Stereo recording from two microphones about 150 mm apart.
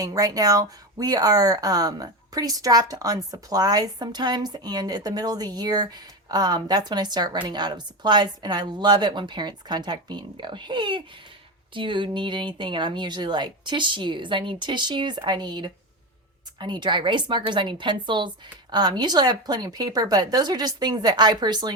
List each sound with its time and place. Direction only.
0.0 s speech: 25° right (ahead or behind)